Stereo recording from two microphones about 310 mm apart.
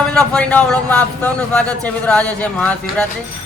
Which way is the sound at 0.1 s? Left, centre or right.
Centre.